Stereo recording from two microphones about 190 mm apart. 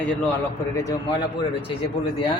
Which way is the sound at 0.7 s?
15° left (ahead or behind).